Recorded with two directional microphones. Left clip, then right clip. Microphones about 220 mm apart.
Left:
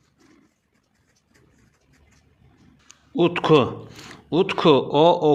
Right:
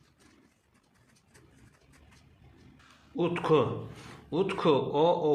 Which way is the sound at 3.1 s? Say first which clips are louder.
Left 9 dB; 40° left (ahead or behind).